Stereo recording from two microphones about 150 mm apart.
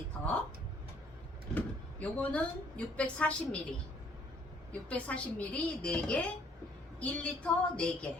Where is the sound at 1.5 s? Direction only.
10° left (ahead or behind).